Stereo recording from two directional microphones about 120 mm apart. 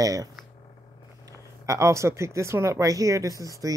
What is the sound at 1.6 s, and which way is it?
Speech, 25° right (ahead or behind).